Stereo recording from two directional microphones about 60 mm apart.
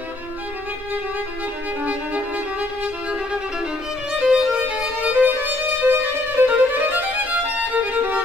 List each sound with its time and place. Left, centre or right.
1.9 s violin: right
4.2 s violin: centre
4.6 s violin: right